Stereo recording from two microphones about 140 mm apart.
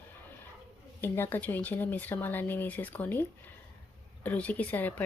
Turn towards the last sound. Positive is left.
turn(degrees=10)  # may be behind; listen again after turning